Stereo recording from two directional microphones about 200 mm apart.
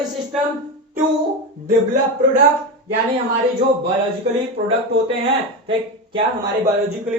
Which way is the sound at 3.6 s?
30° right (ahead or behind).